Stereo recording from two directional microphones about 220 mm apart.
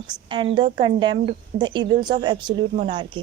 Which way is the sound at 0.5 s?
20° right (ahead or behind).